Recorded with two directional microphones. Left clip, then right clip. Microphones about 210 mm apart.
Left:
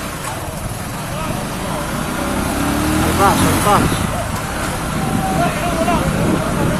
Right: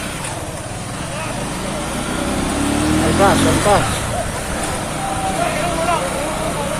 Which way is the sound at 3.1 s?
5° left (ahead or behind).